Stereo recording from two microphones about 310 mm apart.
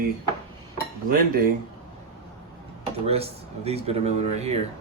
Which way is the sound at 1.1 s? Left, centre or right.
Right.